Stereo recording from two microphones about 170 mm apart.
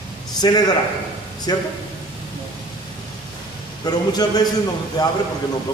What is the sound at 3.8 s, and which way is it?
A man's voice, 25° left (ahead or behind).